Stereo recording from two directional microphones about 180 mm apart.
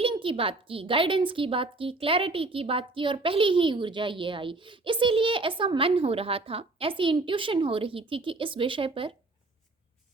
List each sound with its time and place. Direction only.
0.0 s a woman's voice: 30° right (ahead or behind)